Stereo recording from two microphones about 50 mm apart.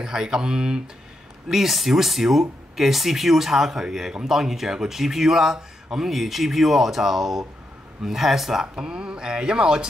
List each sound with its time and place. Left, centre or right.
0.0 s speech: centre